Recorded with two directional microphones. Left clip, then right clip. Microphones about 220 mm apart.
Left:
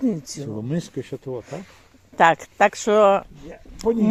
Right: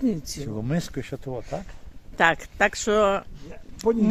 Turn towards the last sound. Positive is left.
turn(degrees=0)  # may be behind; listen again after turning